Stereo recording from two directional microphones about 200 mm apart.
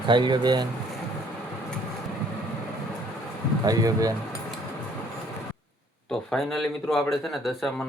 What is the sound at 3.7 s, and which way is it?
Speech, 20° right (ahead or behind).